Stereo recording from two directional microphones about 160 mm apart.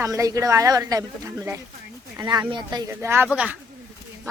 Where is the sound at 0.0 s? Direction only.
20° right (ahead or behind).